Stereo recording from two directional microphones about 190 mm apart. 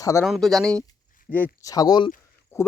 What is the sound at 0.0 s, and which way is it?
Speech, 15° left (ahead or behind).